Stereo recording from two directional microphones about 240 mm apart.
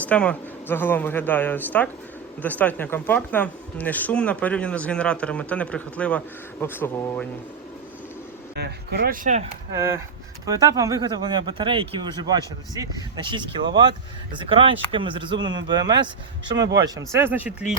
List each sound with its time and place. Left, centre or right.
0.0 s speech: centre
8.5 s speech: right
9.7 s speech: centre